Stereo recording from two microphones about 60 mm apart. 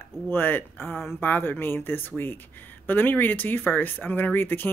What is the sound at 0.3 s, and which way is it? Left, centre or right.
Speech, left.